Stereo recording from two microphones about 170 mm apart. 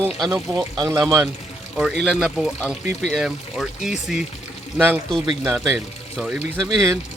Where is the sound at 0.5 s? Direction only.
20° right (ahead or behind).